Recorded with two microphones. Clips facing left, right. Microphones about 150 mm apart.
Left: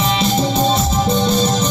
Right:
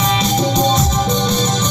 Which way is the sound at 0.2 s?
5° left (ahead or behind).